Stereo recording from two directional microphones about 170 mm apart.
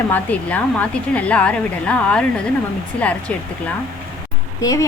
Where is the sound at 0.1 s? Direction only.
10° left (ahead or behind).